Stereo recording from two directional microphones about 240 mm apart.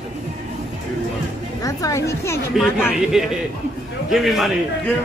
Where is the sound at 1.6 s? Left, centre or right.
Centre.